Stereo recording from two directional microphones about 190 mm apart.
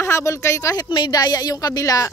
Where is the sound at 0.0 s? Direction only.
15° left (ahead or behind).